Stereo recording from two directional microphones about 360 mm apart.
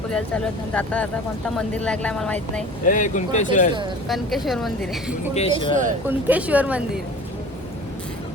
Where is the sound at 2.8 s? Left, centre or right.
Left.